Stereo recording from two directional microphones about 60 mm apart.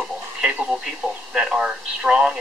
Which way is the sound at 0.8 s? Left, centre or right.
Centre.